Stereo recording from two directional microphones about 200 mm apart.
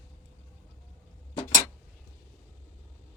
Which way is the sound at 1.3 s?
25° left (ahead or behind).